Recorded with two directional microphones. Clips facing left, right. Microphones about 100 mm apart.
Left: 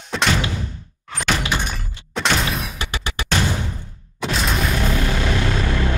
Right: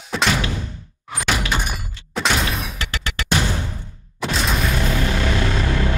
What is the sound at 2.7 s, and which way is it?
Music, 15° left (ahead or behind).